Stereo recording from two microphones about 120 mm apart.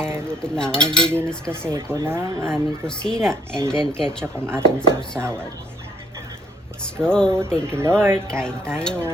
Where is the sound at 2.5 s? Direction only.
5° left (ahead or behind).